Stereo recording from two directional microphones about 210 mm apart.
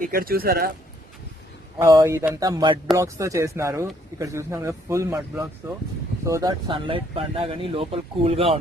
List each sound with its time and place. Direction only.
0.0 s speech: 45° right (ahead or behind)
1.8 s speech: 15° right (ahead or behind)